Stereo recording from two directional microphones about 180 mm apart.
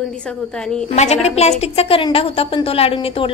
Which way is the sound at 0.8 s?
35° left (ahead or behind).